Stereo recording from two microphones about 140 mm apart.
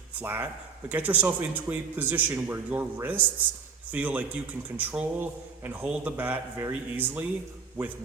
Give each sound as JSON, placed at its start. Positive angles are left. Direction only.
{"t": 0.2, "sound": "a man's voice", "side_deg": -15}